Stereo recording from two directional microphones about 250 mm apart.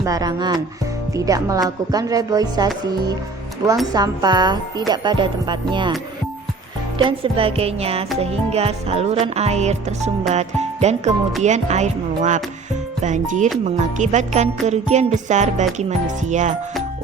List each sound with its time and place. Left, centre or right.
0.0 s music: centre
3.9 s music: centre
7.0 s music: right